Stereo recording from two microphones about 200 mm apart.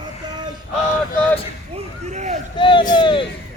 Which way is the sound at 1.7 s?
35° right (ahead or behind).